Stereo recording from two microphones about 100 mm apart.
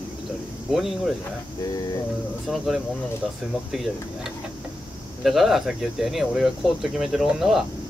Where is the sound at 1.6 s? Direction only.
40° left (ahead or behind).